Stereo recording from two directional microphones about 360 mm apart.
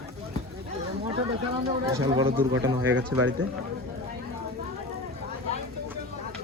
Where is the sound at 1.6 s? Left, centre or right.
Centre.